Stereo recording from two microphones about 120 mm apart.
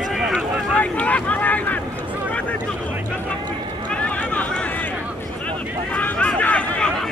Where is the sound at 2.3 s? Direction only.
10° left (ahead or behind).